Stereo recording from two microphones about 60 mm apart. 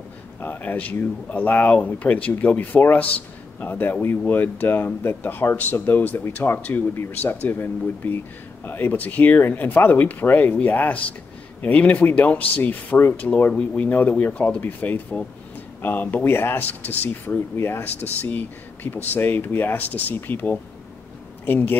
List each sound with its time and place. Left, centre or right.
0.4 s speech: left
6.7 s speech: left; by 13.8 s centre
13.8 s speech: left
17.6 s speech: left